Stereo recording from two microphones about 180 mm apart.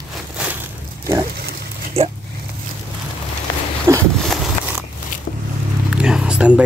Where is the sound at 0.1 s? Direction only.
5° right (ahead or behind).